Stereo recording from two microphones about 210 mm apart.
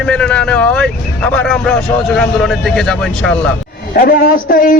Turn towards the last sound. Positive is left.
turn(degrees=40)  # may be behind; listen again after turning